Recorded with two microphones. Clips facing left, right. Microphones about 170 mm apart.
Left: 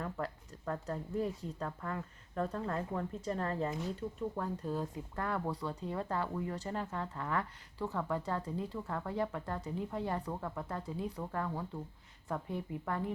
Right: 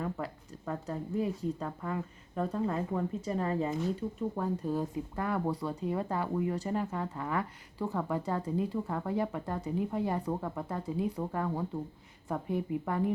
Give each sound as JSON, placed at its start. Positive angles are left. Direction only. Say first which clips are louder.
{"t": 0.0, "sound": "speech", "louder": "right 3 dB", "side_deg": -10}